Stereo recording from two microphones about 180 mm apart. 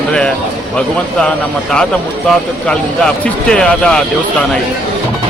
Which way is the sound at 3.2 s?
5° left (ahead or behind).